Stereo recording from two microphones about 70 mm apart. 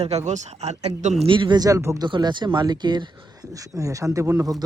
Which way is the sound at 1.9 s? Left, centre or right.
Right.